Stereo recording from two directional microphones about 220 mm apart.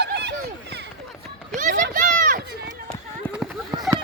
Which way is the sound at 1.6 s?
35° right (ahead or behind).